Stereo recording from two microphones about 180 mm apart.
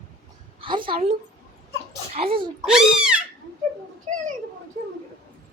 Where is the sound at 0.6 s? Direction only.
30° right (ahead or behind).